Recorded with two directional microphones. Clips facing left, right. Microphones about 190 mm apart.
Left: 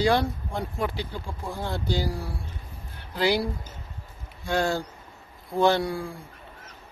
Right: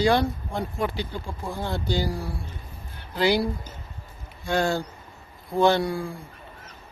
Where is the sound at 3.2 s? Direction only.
Centre (ahead or behind).